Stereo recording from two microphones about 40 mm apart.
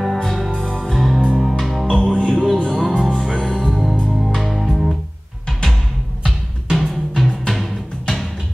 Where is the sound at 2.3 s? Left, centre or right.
Centre.